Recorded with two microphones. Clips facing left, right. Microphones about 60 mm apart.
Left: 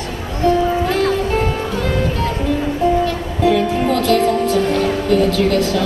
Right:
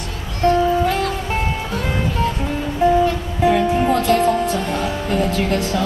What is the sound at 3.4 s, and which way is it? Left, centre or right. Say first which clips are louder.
Music: even; right.